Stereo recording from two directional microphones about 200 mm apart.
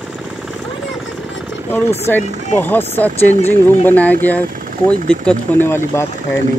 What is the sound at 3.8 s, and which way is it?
Speech, 10° left (ahead or behind).